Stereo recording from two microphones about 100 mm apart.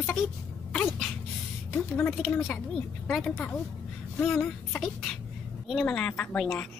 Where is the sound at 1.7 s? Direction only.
20° left (ahead or behind).